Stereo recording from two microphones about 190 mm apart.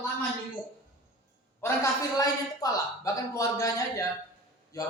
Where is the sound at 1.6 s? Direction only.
15° left (ahead or behind).